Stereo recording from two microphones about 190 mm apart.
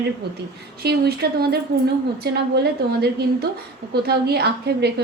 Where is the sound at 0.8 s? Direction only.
55° right (ahead or behind).